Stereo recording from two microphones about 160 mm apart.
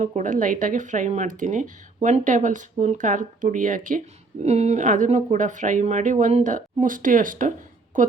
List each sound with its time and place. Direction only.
0.0 s speech: 50° right (ahead or behind)
4.4 s a woman's voice: 45° right (ahead or behind)